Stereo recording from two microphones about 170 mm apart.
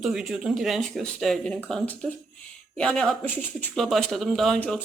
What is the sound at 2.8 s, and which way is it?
Speech, 5° left (ahead or behind).